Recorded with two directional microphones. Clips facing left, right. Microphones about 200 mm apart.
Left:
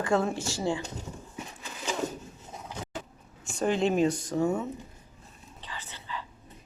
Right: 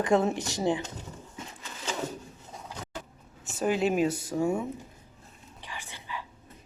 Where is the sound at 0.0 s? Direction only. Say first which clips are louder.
Right 2 dB; 20° right (ahead or behind).